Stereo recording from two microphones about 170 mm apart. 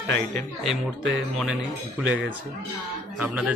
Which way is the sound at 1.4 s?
5° right (ahead or behind).